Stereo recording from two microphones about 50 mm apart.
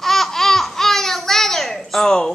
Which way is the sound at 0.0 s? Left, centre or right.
Centre.